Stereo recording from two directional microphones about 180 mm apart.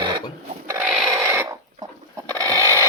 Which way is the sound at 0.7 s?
10° right (ahead or behind).